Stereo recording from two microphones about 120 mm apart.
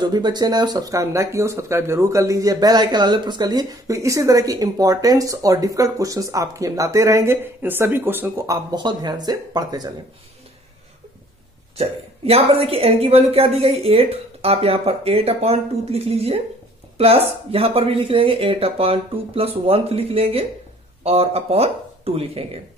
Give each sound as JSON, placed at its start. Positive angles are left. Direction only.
{"t": 0.0, "sound": "speech", "side_deg": -35}
{"t": 8.7, "sound": "speech", "side_deg": -35}
{"t": 11.7, "sound": "a woman's voice", "side_deg": -55}